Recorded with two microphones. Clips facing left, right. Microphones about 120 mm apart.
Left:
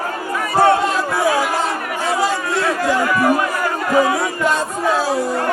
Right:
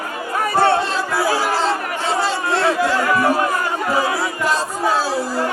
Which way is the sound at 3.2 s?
30° right (ahead or behind).